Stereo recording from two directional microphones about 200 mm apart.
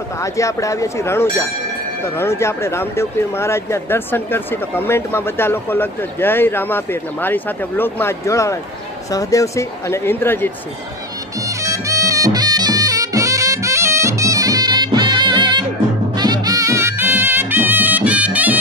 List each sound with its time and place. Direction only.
0.2 s speech: 15° left (ahead or behind)
11.4 s music: 15° right (ahead or behind)